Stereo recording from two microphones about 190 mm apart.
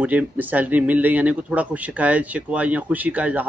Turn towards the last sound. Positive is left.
turn(degrees=-10)  # may be behind; listen again after turning